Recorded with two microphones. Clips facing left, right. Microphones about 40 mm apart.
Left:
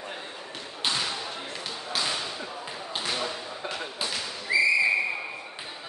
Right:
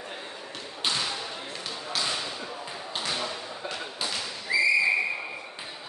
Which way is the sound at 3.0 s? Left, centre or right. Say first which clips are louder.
Left 1 dB; centre.